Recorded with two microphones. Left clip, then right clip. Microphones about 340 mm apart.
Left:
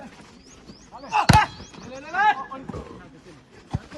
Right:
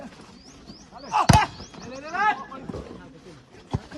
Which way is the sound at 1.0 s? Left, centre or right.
Centre.